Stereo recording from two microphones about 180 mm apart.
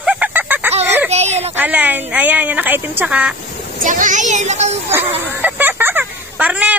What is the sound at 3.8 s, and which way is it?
Speech, 45° right (ahead or behind).